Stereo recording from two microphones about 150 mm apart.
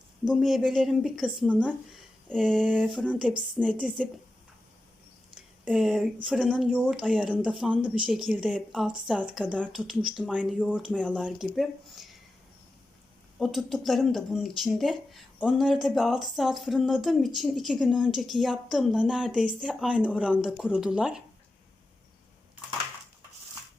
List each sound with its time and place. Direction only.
0.3 s speech: centre (ahead or behind)
2.3 s a woman's voice: centre (ahead or behind)
5.3 s a sound: 5° right (ahead or behind)
6.2 s speech: 5° right (ahead or behind)
13.4 s speech: centre (ahead or behind)